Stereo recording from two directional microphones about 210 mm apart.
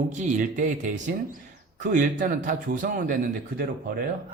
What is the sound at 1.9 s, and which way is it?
A man's voice, 40° right (ahead or behind).